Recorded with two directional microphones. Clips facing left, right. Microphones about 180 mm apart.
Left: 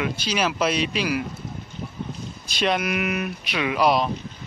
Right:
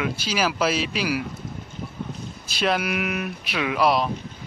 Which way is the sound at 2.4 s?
5° right (ahead or behind).